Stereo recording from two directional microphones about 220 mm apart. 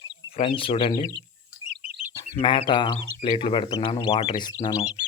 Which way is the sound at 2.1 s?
25° left (ahead or behind).